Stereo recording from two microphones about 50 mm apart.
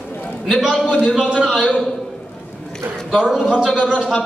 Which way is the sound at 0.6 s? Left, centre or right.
Left.